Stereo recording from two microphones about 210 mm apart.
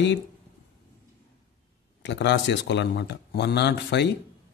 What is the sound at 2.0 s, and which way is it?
Speech, 55° left (ahead or behind).